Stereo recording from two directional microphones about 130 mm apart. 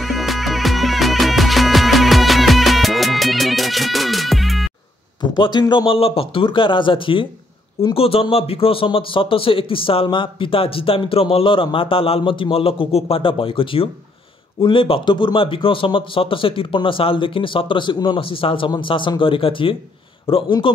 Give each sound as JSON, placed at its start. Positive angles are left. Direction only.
{"t": 0.0, "sound": "music", "side_deg": 0}
{"t": 5.2, "sound": "a man's voice", "side_deg": 35}